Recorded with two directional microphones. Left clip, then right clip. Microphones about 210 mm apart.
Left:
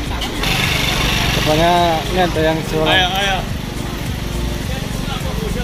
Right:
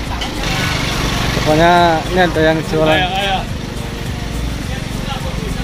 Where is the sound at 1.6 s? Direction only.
20° right (ahead or behind).